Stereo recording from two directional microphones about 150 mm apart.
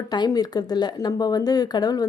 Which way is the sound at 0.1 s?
25° left (ahead or behind).